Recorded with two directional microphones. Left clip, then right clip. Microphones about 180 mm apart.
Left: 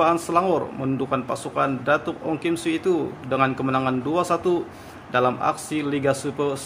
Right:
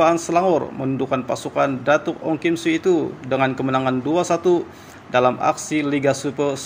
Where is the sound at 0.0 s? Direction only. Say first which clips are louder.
Right 3 dB; 15° right (ahead or behind).